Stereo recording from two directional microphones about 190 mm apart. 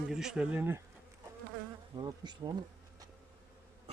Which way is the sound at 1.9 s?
25° right (ahead or behind).